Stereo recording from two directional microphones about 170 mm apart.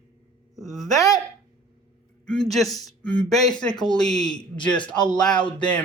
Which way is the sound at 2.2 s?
5° left (ahead or behind).